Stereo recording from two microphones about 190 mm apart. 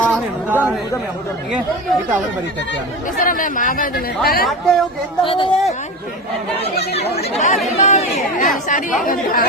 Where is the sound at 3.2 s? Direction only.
45° left (ahead or behind).